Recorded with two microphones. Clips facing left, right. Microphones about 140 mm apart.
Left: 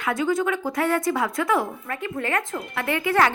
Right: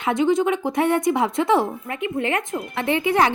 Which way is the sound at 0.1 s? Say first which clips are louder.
Right 4 dB; 20° right (ahead or behind).